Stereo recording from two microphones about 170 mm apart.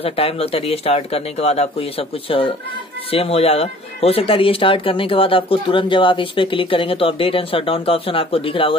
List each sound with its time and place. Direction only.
0.0 s speech: 35° left (ahead or behind)